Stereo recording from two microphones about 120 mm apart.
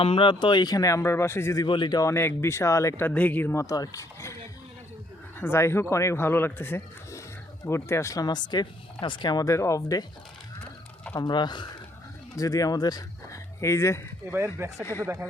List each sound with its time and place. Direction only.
0.0 s speech: 50° left (ahead or behind); by 1.6 s 20° left (ahead or behind)
1.6 s speech: 40° left (ahead or behind); by 3.1 s 25° left (ahead or behind)
3.1 s speech: 15° left (ahead or behind)
5.4 s speech: 20° left (ahead or behind)
11.2 s speech: 40° left (ahead or behind)
14.3 s speech: 20° right (ahead or behind)